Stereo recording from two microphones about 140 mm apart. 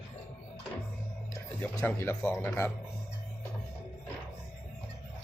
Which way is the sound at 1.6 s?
15° left (ahead or behind).